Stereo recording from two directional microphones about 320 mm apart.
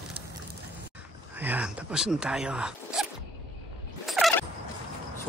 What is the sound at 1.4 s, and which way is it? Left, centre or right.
Speech, centre.